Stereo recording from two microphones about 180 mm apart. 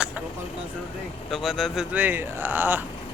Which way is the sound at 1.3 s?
Centre (ahead or behind).